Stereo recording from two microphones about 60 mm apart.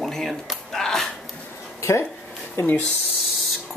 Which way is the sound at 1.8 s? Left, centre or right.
Left.